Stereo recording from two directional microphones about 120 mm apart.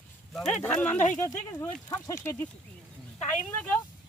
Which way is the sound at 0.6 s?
10° left (ahead or behind).